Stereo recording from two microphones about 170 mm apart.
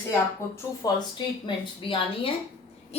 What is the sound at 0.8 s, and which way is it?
A woman's voice, 20° left (ahead or behind).